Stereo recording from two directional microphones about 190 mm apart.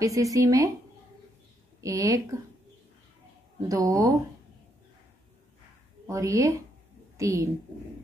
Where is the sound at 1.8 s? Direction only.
15° right (ahead or behind).